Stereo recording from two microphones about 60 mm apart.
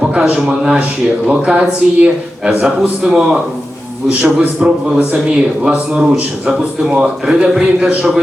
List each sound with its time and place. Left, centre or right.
0.1 s a man's voice: centre